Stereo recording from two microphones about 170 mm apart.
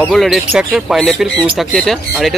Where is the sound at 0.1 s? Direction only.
Centre (ahead or behind).